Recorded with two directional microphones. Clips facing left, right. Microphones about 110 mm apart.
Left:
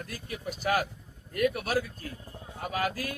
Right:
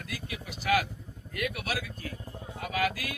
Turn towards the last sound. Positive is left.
turn(degrees=40)  # may be behind; listen again after turning